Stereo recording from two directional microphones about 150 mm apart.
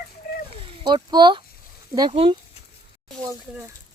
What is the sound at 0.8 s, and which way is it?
Speech, 30° right (ahead or behind).